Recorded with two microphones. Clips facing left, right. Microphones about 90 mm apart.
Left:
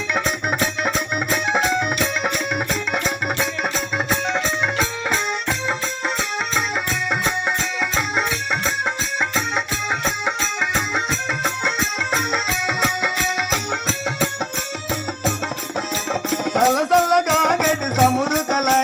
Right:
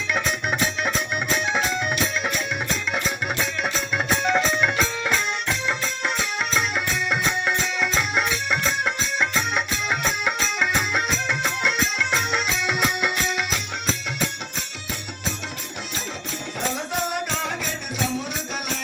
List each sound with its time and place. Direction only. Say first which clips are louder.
0.8 s music: left 3 dB; 45° left (ahead or behind)
4.3 s music: right 1 dB; 5° left (ahead or behind)
4.8 s music: left 1 dB; 40° left (ahead or behind)
7.1 s music: left 2 dB; 35° left (ahead or behind)
16.6 s music: left 12 dB; 90° left; by 18.8 s 60° left (ahead or behind)